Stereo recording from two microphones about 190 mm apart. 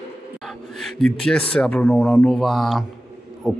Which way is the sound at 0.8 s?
5° left (ahead or behind).